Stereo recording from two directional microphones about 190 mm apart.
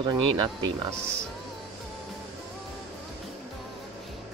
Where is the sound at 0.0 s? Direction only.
25° right (ahead or behind).